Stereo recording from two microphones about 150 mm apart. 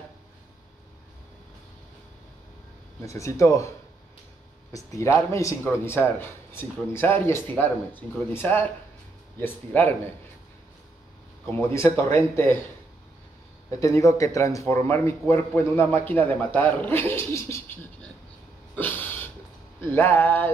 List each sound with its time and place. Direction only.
3.2 s speech: 20° left (ahead or behind)
4.7 s speech: 20° left (ahead or behind)
11.4 s speech: 15° left (ahead or behind)
13.7 s speech: 20° left (ahead or behind)
18.8 s a sound: 10° left (ahead or behind)
19.8 s speech: 15° left (ahead or behind)